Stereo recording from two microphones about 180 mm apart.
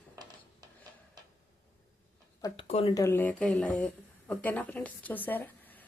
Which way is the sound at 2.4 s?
30° left (ahead or behind).